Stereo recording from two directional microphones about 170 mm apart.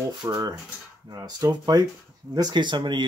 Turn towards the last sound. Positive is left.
turn(degrees=-25)  # may be behind; listen again after turning